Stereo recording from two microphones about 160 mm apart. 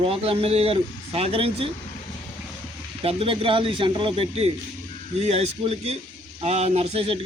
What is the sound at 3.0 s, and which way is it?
A man's voice, 35° right (ahead or behind).